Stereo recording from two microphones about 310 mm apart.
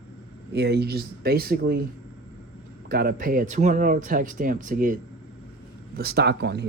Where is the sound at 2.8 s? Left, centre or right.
Right.